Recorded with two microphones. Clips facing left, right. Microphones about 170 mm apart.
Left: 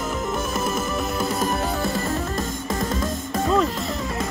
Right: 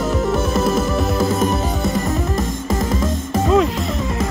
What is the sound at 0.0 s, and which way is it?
Music, 35° right (ahead or behind).